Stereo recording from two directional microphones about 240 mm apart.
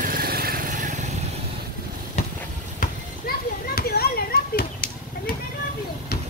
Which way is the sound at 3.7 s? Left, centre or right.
Left.